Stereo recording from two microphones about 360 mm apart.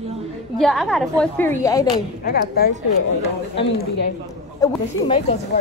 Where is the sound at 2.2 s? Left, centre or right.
Left.